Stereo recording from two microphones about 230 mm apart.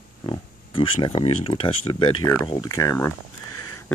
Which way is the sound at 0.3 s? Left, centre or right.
Left.